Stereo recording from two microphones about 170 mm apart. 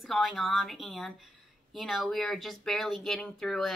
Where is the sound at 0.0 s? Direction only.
Centre (ahead or behind).